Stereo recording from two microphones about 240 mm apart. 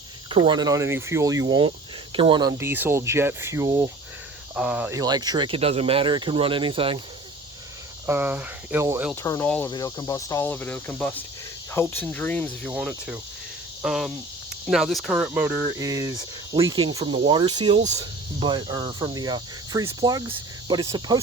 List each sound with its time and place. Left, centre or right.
0.3 s speech: centre
8.0 s speech: centre
9.2 s speech: centre
10.9 s cricket: centre
11.7 s speech: centre
12.7 s cricket: centre
14.7 s speech: centre